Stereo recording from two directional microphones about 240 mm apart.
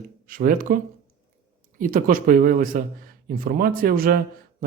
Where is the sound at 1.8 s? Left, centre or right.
Right.